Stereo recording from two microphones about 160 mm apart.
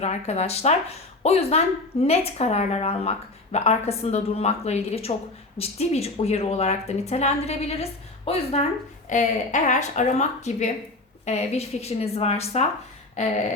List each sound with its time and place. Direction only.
0.0 s speech: 45° left (ahead or behind)